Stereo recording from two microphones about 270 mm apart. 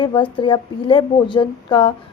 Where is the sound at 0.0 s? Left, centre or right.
Centre.